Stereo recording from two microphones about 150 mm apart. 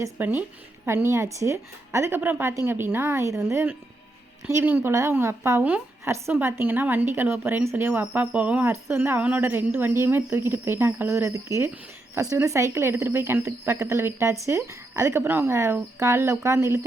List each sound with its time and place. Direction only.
0.0 s a woman's voice: 10° right (ahead or behind)